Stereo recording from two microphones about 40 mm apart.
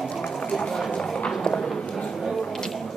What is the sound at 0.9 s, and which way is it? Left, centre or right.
Clip-clop, left.